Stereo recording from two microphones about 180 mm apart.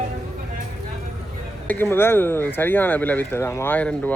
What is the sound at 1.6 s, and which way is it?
Speech, 10° left (ahead or behind).